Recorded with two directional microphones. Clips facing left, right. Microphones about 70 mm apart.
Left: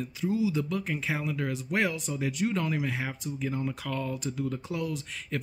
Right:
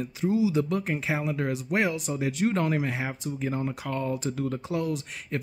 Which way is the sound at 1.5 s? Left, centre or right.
Centre.